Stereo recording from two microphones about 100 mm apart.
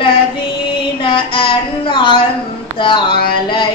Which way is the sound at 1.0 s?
60° left (ahead or behind).